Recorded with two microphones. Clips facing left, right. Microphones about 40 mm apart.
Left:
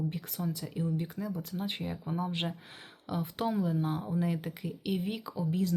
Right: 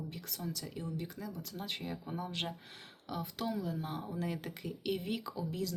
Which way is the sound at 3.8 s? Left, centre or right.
Centre.